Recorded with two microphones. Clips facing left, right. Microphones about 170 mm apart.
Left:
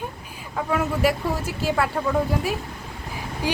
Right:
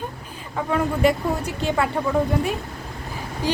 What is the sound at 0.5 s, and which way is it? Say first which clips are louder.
A woman's voice: right 1 dB; 5° left (ahead or behind).